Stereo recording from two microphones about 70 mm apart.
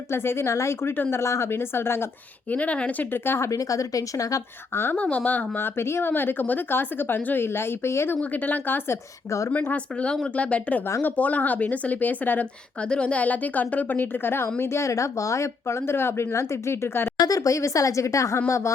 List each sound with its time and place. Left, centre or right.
0.1 s speech: left
2.5 s speech: left
4.7 s speech: left
4.9 s speech: left
8.2 s a woman's voice: left
9.5 s a woman's voice: centre
12.8 s a woman's voice: centre; by 17.1 s left
17.2 s speech: left